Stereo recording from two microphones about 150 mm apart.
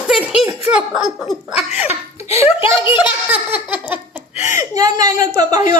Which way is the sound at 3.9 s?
15° right (ahead or behind).